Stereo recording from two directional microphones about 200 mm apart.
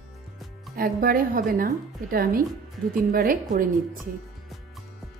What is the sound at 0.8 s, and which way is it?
A woman's voice, 45° right (ahead or behind).